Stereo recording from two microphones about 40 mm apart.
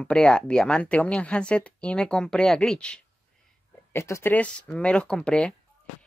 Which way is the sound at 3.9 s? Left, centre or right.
Left.